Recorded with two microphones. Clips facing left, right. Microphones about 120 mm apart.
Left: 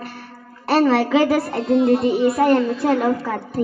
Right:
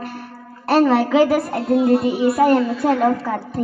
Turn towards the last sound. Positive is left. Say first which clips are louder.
# right 1 dB
turn(degrees=0)  # may be behind; listen again after turning